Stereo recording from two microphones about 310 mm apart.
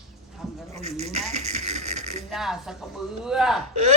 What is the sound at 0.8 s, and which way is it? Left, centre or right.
Speech, right.